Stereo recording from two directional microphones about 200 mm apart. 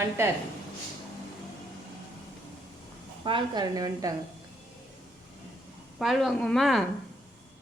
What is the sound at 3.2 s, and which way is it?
Speech, 25° right (ahead or behind).